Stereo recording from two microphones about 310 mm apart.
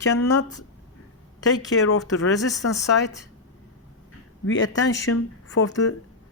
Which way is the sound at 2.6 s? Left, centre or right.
Left.